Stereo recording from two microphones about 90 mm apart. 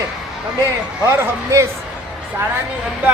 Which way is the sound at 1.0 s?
30° right (ahead or behind).